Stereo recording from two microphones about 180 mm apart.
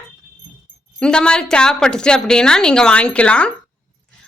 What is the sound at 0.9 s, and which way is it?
A woman's voice, 5° left (ahead or behind).